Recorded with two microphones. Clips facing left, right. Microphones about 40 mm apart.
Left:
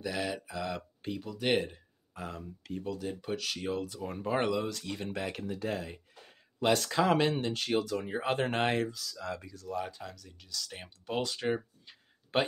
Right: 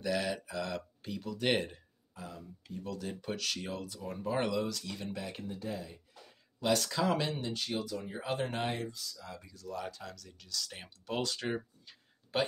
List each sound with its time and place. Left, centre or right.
0.0 s speech: centre
2.1 s speech: left
2.8 s speech: centre
3.8 s speech: left
5.1 s speech: left
5.5 s a sound: left
6.9 s speech: left
8.7 s speech: left
9.7 s speech: centre
12.3 s speech: left